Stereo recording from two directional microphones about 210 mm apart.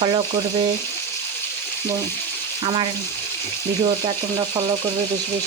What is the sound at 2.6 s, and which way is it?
Speech, 25° right (ahead or behind).